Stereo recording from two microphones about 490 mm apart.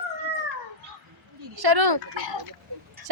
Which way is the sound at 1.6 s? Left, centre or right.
Right.